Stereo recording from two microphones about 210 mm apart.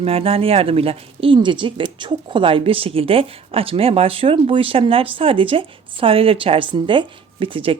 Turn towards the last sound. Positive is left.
turn(degrees=-25)  # may be behind; listen again after turning